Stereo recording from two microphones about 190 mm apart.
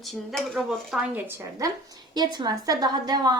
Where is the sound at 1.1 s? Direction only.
15° right (ahead or behind).